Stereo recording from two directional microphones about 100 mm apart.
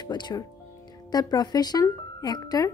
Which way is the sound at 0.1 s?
40° left (ahead or behind).